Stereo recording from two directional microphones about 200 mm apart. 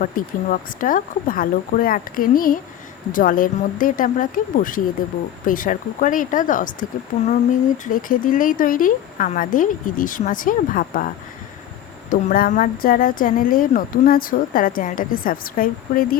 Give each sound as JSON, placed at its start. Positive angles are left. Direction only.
{"t": 0.0, "sound": "speech", "side_deg": 45}
{"t": 12.1, "sound": "speech", "side_deg": 45}